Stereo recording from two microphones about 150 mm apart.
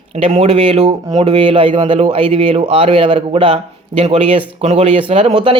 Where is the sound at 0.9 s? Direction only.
35° right (ahead or behind).